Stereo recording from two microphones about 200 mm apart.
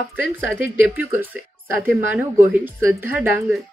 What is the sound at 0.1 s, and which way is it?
Speech, 10° right (ahead or behind).